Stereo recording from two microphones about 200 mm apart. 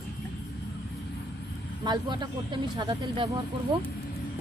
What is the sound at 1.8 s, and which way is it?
Speech, 20° right (ahead or behind).